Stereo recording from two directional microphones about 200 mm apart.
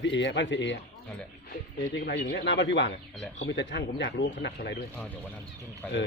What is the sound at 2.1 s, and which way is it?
Speech, 65° left (ahead or behind).